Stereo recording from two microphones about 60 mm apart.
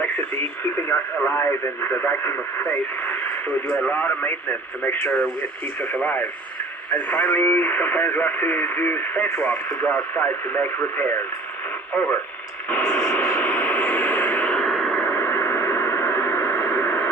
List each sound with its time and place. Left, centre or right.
0.0 s speech: left
3.7 s radio: centre
3.9 s speech: left
9.6 s speech: left
10.2 s speech: left
12.8 s radio: centre
13.1 s a sound: left
14.6 s a sound: centre
15.0 s a sound: left